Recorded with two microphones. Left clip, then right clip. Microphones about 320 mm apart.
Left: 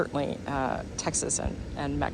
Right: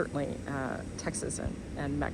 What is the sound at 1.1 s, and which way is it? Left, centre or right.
Speech, left.